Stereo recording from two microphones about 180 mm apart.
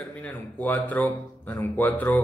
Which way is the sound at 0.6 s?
10° left (ahead or behind).